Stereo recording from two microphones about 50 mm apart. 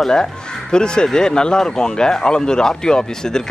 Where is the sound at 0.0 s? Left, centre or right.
Centre.